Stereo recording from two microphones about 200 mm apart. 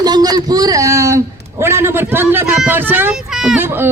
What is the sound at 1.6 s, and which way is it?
A woman's voice, 10° right (ahead or behind).